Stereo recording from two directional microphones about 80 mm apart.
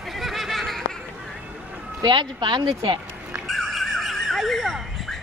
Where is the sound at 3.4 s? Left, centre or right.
Centre.